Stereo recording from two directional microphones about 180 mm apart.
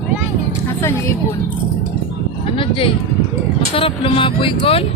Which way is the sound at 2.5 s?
30° left (ahead or behind).